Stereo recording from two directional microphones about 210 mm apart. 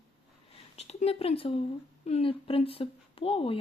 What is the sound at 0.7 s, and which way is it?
Speech, 30° left (ahead or behind).